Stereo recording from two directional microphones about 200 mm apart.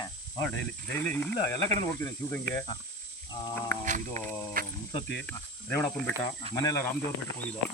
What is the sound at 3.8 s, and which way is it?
Speech, 40° right (ahead or behind).